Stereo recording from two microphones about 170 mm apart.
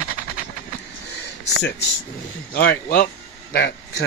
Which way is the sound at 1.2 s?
85° left.